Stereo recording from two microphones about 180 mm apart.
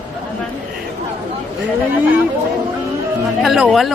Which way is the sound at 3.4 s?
Centre (ahead or behind).